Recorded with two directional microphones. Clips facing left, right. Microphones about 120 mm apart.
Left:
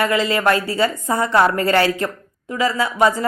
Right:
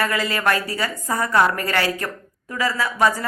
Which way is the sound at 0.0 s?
25° left (ahead or behind).